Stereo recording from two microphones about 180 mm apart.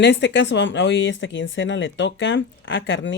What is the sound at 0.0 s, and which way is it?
Speech, 75° left (ahead or behind).